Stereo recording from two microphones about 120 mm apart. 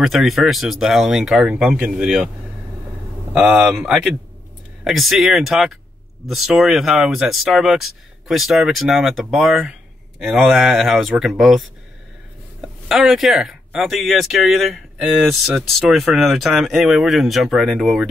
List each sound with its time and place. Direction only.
0.0 s speech: centre (ahead or behind)
3.3 s speech: 10° right (ahead or behind)
12.6 s speech: centre (ahead or behind)